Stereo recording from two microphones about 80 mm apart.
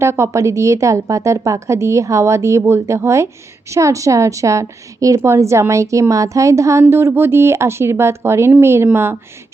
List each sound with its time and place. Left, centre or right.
0.0 s a woman's voice: right